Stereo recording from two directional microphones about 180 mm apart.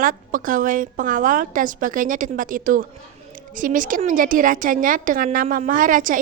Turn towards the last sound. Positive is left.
turn(degrees=-50)  # may be behind; listen again after turning